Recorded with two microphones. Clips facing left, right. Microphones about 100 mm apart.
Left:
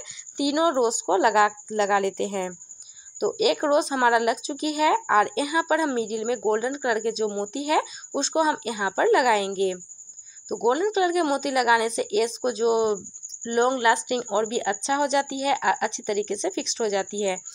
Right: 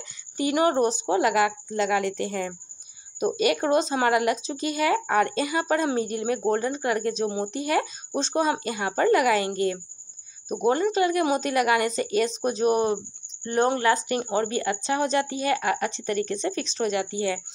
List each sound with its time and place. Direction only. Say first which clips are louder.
0.4 s speech: even; 10° left (ahead or behind)